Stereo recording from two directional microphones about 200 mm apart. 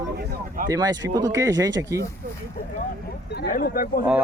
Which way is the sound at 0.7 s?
15° right (ahead or behind).